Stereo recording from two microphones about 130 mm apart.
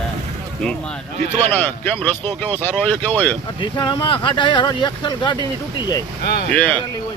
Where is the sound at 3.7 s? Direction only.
35° left (ahead or behind).